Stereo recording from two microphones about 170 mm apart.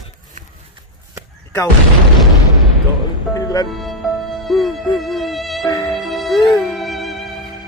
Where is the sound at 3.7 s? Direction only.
Centre (ahead or behind).